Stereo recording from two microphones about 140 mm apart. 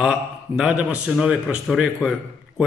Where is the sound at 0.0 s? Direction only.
5° right (ahead or behind).